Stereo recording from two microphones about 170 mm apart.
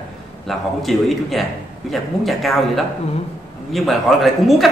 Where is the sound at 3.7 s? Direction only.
Centre (ahead or behind).